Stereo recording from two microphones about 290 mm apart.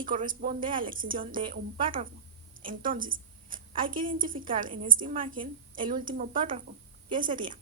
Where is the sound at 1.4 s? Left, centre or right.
Centre.